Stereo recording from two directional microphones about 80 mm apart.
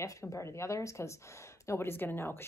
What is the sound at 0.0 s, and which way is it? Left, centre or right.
Speech, left.